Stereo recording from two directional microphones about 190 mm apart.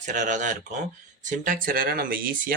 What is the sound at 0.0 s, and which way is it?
Speech, 40° right (ahead or behind).